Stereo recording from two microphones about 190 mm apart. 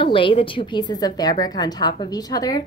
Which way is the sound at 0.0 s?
25° left (ahead or behind).